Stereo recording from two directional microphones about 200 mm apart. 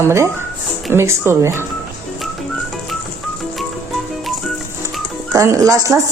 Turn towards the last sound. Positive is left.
turn(degrees=-15)  # may be behind; listen again after turning